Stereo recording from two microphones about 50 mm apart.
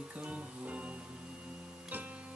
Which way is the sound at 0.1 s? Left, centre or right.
Right.